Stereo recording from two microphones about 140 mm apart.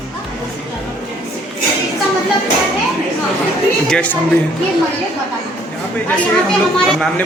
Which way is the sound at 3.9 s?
10° left (ahead or behind).